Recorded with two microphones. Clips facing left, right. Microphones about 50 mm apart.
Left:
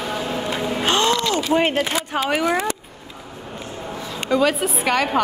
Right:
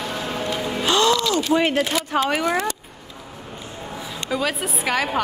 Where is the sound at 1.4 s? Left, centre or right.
Left.